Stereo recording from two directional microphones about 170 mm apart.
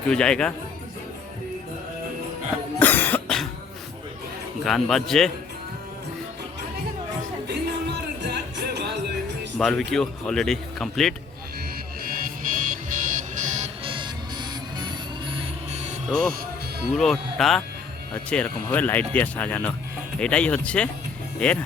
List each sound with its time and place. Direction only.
0.1 s speech: 5° left (ahead or behind)
2.7 s cough: 10° left (ahead or behind)
4.6 s speech: centre (ahead or behind)
7.4 s music: 75° right (ahead or behind)
9.6 s speech: 5° left (ahead or behind)
12.0 s music: 55° right (ahead or behind)
13.8 s music: 30° right (ahead or behind)
16.0 s speech: centre (ahead or behind)